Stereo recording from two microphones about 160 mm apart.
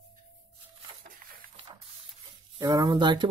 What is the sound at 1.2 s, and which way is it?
Printer, 65° right (ahead or behind).